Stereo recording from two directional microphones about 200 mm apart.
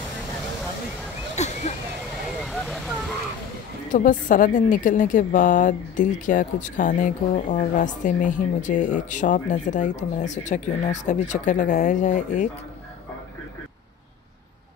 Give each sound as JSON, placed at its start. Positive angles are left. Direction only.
{"t": 1.3, "sound": "a sound", "side_deg": 35}
{"t": 2.4, "sound": "vehicle", "side_deg": 0}
{"t": 3.9, "sound": "a woman's voice", "side_deg": 40}